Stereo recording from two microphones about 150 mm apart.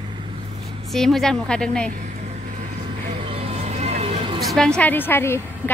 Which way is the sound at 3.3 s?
45° right (ahead or behind).